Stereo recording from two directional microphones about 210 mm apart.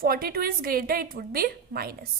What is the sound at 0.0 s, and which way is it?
A woman's voice, 45° right (ahead or behind).